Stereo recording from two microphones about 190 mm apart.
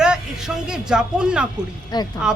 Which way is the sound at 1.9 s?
20° left (ahead or behind).